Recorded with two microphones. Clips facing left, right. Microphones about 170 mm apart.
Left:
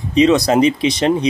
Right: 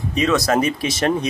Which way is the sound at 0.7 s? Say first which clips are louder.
Left 4 dB; 20° left (ahead or behind).